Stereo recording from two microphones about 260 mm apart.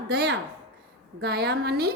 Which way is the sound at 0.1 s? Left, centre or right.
Right.